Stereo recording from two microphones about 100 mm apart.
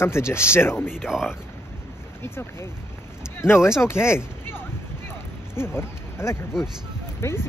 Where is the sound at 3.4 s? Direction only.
25° left (ahead or behind).